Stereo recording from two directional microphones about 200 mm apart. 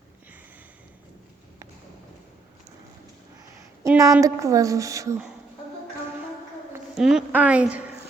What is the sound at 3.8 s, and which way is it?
A woman's voice, 15° right (ahead or behind).